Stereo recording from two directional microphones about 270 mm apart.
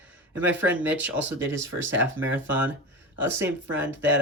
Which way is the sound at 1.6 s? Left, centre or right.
Right.